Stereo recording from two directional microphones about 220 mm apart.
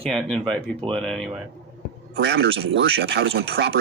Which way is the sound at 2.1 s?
45° right (ahead or behind).